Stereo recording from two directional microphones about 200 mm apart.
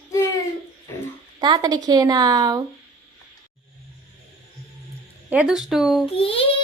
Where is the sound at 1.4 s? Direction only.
20° right (ahead or behind).